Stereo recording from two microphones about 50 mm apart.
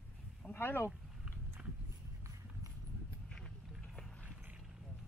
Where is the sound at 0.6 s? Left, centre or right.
Left.